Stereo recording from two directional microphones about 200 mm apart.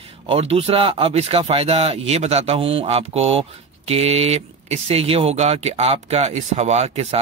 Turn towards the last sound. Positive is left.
turn(degrees=-30)  # may be behind; listen again after turning